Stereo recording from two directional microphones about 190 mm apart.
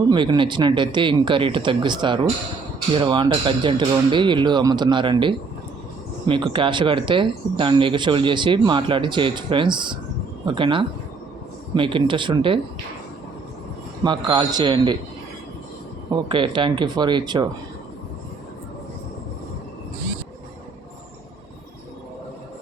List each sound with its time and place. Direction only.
0.1 s speech: 25° right (ahead or behind)
14.0 s speech: 25° right (ahead or behind)
16.0 s speech: 25° right (ahead or behind)